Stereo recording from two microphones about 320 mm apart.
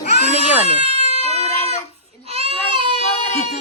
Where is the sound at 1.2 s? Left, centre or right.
Centre.